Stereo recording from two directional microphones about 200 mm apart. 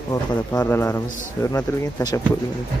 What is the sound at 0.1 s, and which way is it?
A man's voice, 15° left (ahead or behind).